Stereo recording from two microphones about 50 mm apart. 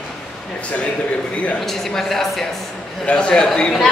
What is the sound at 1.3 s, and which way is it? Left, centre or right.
Speech, left.